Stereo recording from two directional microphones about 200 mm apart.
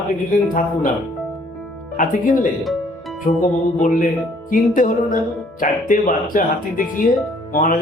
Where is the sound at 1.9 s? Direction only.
40° left (ahead or behind).